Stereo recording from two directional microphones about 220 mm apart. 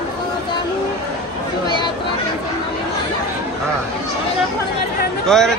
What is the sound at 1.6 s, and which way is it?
Speech, 20° left (ahead or behind).